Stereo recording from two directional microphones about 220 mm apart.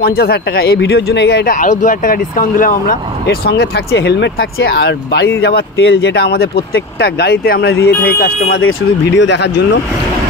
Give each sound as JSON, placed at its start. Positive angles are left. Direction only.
{"t": 0.0, "sound": "speech", "side_deg": 45}
{"t": 8.5, "sound": "speech", "side_deg": 60}